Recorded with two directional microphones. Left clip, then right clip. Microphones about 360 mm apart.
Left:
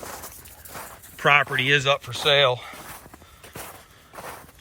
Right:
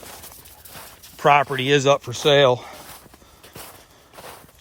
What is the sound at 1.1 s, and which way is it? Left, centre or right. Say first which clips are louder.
Speech: right 2 dB; centre.